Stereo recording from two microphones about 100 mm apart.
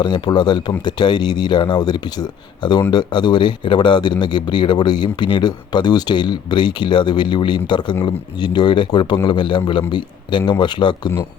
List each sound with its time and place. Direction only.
0.0 s a man's voice: 50° left (ahead or behind)